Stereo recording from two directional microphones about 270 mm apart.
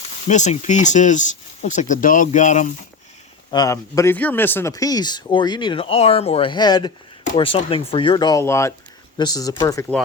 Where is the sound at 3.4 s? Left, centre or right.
Centre.